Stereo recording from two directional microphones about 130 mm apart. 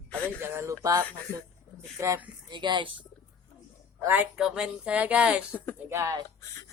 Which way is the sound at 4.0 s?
15° right (ahead or behind).